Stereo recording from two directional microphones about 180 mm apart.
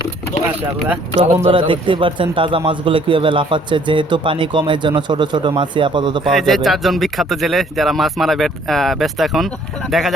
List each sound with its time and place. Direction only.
1.2 s a man's voice: 30° right (ahead or behind)
6.2 s speech: centre (ahead or behind)